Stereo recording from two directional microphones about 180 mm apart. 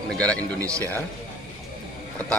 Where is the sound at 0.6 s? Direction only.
15° right (ahead or behind).